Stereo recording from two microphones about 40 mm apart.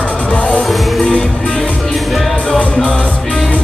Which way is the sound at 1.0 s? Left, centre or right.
Left.